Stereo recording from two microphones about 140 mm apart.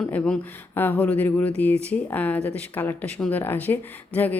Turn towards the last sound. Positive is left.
turn(degrees=10)  # may be behind; listen again after turning